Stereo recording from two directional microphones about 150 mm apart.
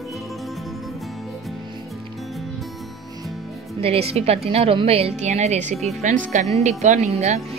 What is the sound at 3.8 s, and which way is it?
A woman's voice, 40° right (ahead or behind).